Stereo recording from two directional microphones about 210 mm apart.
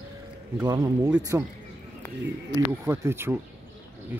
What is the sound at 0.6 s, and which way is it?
Speech, 15° right (ahead or behind).